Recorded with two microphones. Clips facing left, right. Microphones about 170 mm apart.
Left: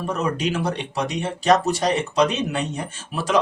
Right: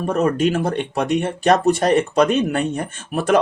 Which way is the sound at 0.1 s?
50° right (ahead or behind).